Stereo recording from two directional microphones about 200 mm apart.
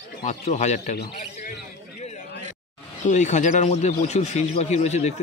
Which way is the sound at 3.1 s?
35° left (ahead or behind).